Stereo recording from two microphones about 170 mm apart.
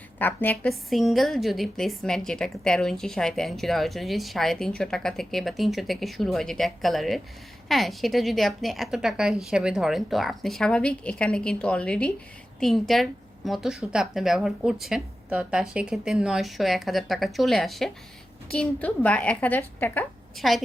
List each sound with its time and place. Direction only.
0.2 s a woman's voice: 10° left (ahead or behind)
20.3 s a woman's voice: centre (ahead or behind)